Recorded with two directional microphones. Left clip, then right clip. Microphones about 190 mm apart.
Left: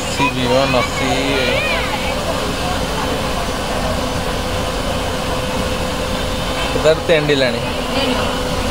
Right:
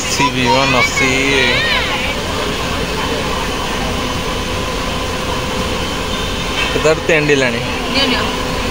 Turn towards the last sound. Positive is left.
turn(degrees=-10)  # may be behind; listen again after turning